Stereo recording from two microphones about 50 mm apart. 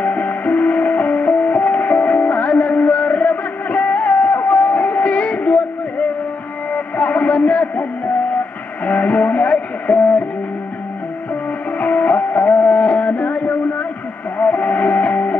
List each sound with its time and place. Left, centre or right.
0.0 s music: left
6.7 s a sound: left
8.8 s music: left
11.8 s music: left